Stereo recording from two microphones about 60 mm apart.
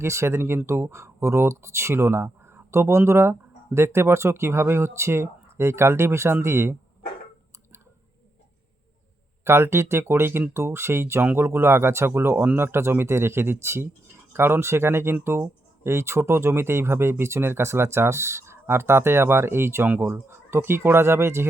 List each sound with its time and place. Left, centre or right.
0.0 s speech: right
9.4 s speech: right